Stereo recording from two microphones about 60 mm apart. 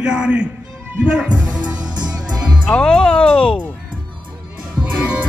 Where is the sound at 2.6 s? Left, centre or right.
Centre.